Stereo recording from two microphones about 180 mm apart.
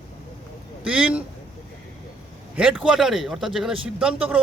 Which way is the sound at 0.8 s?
5° right (ahead or behind).